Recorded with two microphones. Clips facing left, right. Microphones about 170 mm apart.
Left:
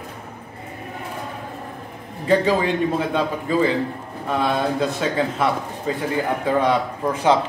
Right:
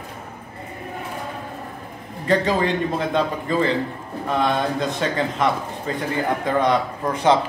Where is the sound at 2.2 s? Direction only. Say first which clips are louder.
Left 1 dB; 5° left (ahead or behind).